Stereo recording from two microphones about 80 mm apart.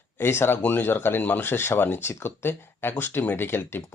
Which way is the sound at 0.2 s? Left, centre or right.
Left.